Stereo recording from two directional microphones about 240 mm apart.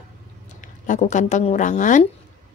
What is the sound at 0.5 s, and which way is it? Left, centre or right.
Speech, left.